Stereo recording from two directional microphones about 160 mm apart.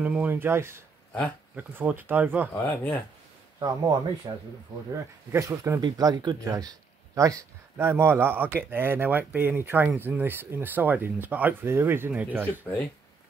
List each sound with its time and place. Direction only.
0.0 s speech: 10° right (ahead or behind)
2.5 s speech: 10° left (ahead or behind)
3.5 s speech: 25° right (ahead or behind)
5.3 s speech: 20° right (ahead or behind)